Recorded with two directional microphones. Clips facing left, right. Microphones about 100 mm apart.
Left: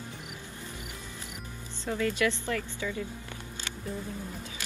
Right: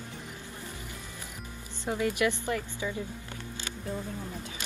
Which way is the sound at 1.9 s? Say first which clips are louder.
Even; 20° right (ahead or behind).